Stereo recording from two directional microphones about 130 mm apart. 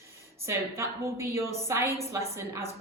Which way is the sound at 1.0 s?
20° right (ahead or behind).